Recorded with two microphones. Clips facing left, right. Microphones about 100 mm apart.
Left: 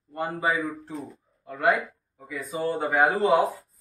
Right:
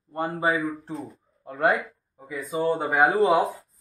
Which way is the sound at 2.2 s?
20° right (ahead or behind).